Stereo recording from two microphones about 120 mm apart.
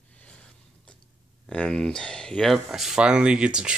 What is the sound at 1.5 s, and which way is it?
Speech, 5° left (ahead or behind).